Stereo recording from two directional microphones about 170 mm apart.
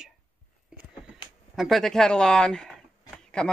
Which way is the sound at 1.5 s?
Centre (ahead or behind).